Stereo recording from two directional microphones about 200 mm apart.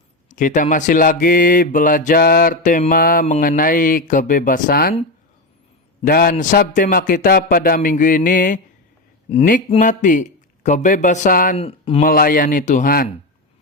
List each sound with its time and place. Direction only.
0.3 s speech: 40° left (ahead or behind)
6.1 s speech: 50° left (ahead or behind)
9.3 s speech: 30° left (ahead or behind)
11.5 s speech: 30° left (ahead or behind)
12.0 s speech: 45° left (ahead or behind)